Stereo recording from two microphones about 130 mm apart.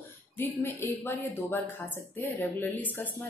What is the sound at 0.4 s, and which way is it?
Speech, 15° left (ahead or behind).